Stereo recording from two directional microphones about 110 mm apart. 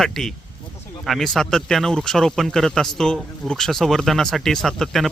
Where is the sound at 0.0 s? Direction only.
5° left (ahead or behind).